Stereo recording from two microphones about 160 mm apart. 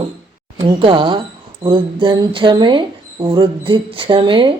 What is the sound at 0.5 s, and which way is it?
Speech, 30° right (ahead or behind).